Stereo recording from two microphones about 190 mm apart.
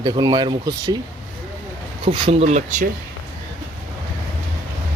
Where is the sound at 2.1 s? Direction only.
30° right (ahead or behind).